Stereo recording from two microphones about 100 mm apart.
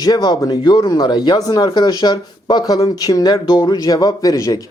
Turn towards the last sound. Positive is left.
turn(degrees=35)  # may be behind; listen again after turning